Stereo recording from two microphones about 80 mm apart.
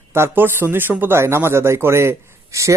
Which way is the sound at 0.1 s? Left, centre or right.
Right.